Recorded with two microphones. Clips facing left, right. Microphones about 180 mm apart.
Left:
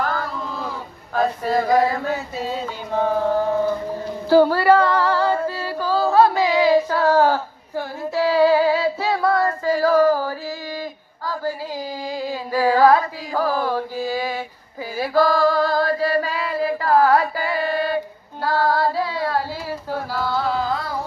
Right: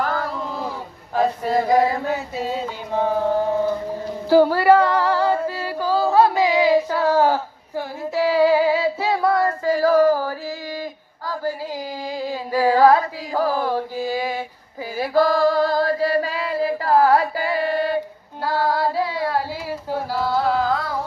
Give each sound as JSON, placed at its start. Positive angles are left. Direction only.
{"t": 0.0, "sound": "a sound", "side_deg": -15}
{"t": 1.1, "sound": "male singing", "side_deg": -20}
{"t": 2.3, "sound": "a sound", "side_deg": -15}
{"t": 4.3, "sound": "female singing", "side_deg": -20}
{"t": 9.8, "sound": "a sound", "side_deg": -25}
{"t": 11.7, "sound": "carnatic music", "side_deg": -25}
{"t": 14.9, "sound": "female singing", "side_deg": -25}
{"t": 18.4, "sound": "female singing", "side_deg": -15}
{"t": 20.3, "sound": "music", "side_deg": -5}